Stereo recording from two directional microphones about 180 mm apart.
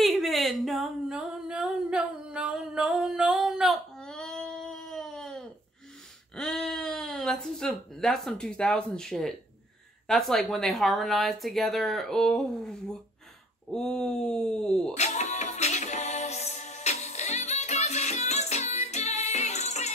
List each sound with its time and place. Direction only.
0.0 s a sound: centre (ahead or behind)
6.3 s speech: 5° left (ahead or behind)
15.0 s music: 40° left (ahead or behind)